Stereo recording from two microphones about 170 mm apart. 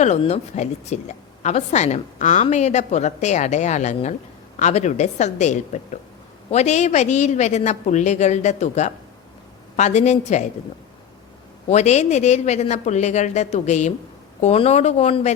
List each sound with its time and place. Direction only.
0.0 s a woman's voice: 40° left (ahead or behind)
11.7 s a woman's voice: 40° left (ahead or behind)